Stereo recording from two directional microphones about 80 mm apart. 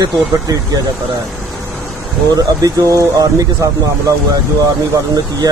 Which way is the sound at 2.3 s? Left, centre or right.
Right.